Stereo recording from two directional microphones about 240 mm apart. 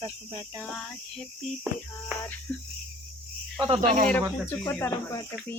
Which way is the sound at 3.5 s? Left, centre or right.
Centre.